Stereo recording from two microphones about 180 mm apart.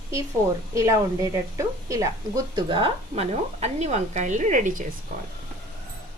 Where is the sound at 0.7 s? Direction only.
15° right (ahead or behind); by 4.8 s 45° right (ahead or behind).